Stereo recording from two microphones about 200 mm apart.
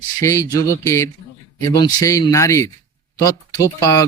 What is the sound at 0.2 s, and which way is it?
Speech, 15° left (ahead or behind).